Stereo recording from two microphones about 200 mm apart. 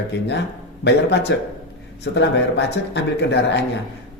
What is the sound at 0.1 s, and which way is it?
Speech, 60° left (ahead or behind).